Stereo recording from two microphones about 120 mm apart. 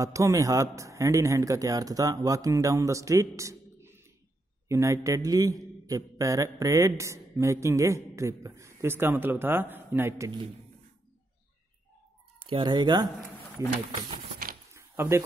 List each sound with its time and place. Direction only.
0.0 s a man's voice: 25° right (ahead or behind)
12.4 s speech: 40° right (ahead or behind)
13.6 s a man's voice: 25° right (ahead or behind)
14.7 s a sound: 20° right (ahead or behind)